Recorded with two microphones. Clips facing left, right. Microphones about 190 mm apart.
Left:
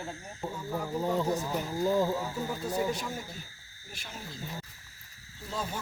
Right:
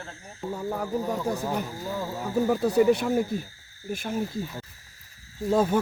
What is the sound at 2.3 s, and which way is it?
Speech, 65° right (ahead or behind).